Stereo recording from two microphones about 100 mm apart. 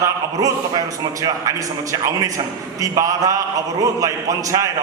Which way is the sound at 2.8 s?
35° right (ahead or behind).